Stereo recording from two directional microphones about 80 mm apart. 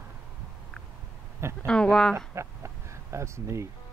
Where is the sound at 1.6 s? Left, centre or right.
Centre.